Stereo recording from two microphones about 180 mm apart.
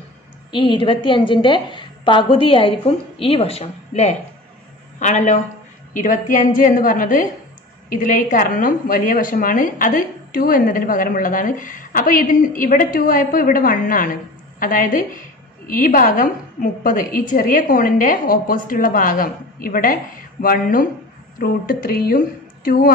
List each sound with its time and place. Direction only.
0.5 s a woman's voice: 30° left (ahead or behind); by 22.9 s 55° left (ahead or behind)